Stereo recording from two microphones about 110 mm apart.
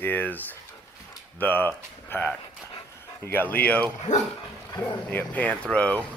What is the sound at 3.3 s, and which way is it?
Speech, 15° left (ahead or behind).